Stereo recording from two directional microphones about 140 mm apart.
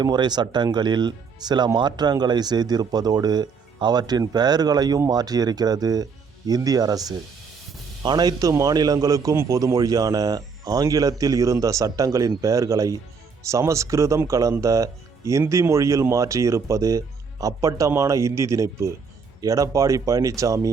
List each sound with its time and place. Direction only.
0.0 s speech: 30° right (ahead or behind)